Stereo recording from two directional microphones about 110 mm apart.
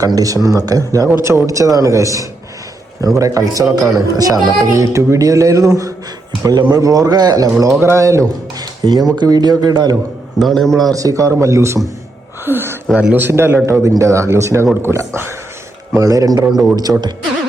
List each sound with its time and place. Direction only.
0.0 s speech: 35° right (ahead or behind)
10.3 s a man's voice: centre (ahead or behind)
10.9 s speech: 30° right (ahead or behind)